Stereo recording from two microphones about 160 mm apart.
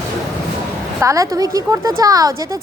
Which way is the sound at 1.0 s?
20° right (ahead or behind).